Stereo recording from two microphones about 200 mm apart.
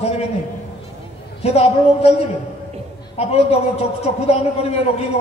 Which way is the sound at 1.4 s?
30° left (ahead or behind).